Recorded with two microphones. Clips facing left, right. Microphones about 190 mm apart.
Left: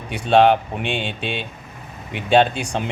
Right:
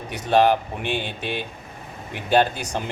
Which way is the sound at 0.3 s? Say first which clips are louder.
Left 3 dB; 75° left (ahead or behind).